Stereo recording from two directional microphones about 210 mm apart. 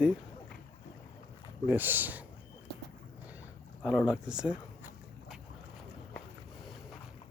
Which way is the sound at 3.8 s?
5° right (ahead or behind).